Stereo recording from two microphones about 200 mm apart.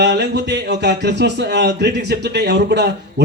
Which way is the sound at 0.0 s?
60° right (ahead or behind).